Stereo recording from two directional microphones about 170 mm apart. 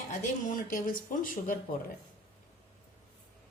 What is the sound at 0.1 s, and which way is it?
A woman's voice, 50° left (ahead or behind).